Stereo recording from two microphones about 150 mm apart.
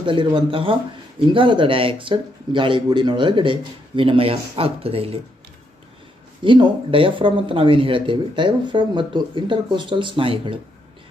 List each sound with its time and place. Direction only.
0.0 s speech: 35° right (ahead or behind)
6.4 s speech: 35° right (ahead or behind)